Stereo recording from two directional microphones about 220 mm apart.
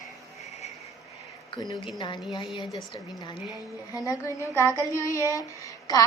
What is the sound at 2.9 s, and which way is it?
A woman's voice, 20° left (ahead or behind).